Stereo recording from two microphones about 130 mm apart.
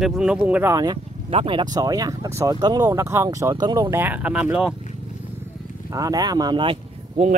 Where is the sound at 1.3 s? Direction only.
45° right (ahead or behind).